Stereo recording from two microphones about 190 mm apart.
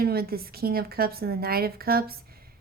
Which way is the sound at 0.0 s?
55° right (ahead or behind).